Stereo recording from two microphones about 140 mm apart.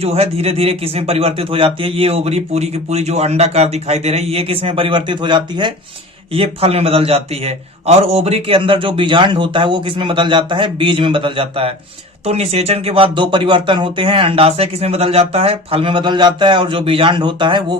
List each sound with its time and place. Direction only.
0.0 s a man's voice: 45° right (ahead or behind)